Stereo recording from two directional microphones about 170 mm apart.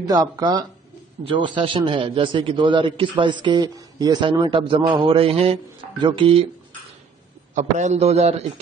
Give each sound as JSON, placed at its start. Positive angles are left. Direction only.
{"t": 0.0, "sound": "a man's voice", "side_deg": -20}
{"t": 7.5, "sound": "a man's voice", "side_deg": -40}